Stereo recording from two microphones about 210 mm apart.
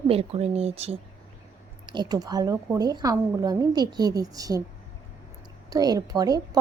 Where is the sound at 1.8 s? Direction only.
20° right (ahead or behind).